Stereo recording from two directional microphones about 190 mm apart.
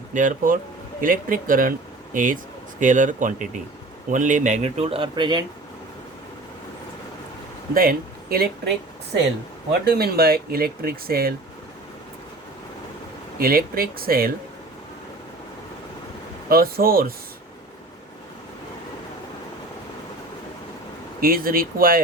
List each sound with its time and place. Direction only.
0.1 s speech: 45° right (ahead or behind); by 5.5 s 25° right (ahead or behind)
7.7 s speech: 50° right (ahead or behind)
9.8 s speech: 55° right (ahead or behind)
13.4 s speech: 50° right (ahead or behind)
16.5 s speech: 50° right (ahead or behind)
21.2 s speech: 50° right (ahead or behind)